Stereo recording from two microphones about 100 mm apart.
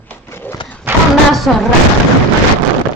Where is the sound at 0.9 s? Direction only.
20° right (ahead or behind).